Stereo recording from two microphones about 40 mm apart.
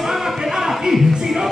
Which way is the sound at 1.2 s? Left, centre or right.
Centre.